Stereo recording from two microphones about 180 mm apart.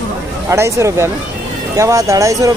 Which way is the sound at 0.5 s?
15° right (ahead or behind).